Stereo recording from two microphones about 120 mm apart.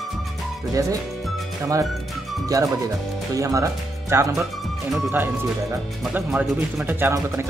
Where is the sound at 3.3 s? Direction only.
25° right (ahead or behind).